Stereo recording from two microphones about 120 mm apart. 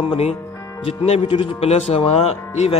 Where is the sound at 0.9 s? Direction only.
50° left (ahead or behind).